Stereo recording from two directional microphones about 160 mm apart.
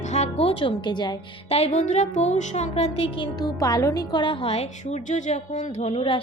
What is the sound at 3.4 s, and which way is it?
A woman's voice, 25° left (ahead or behind).